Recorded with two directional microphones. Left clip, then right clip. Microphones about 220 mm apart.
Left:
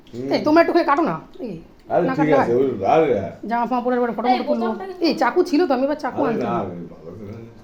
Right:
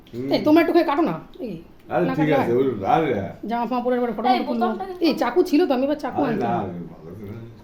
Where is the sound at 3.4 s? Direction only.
Centre (ahead or behind).